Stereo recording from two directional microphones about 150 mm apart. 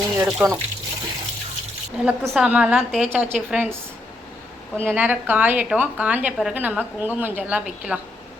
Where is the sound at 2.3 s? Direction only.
5° right (ahead or behind).